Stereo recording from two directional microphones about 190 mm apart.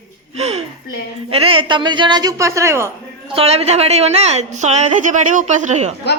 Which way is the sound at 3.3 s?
30° right (ahead or behind).